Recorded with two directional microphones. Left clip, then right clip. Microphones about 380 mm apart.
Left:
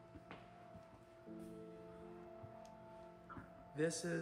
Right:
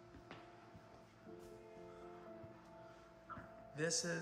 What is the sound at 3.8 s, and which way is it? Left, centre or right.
Speech, centre.